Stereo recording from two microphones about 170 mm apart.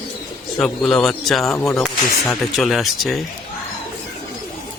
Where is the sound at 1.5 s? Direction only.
15° left (ahead or behind).